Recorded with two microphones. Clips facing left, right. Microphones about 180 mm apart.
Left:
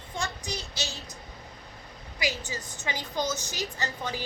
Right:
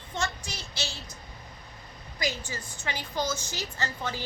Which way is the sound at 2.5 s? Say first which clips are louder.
Left 1 dB; 15° left (ahead or behind).